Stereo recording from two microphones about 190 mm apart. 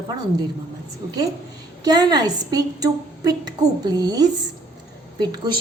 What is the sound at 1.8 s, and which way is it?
A woman's voice, 20° right (ahead or behind).